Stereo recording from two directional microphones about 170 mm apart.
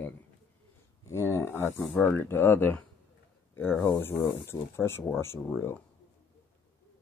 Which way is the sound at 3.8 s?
15° left (ahead or behind).